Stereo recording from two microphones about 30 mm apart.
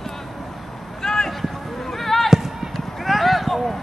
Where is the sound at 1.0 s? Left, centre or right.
Left.